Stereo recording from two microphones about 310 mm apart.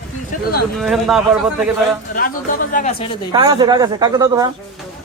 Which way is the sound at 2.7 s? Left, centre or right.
Left.